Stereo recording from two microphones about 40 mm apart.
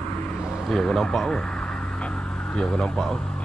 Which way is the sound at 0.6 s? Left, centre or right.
Centre.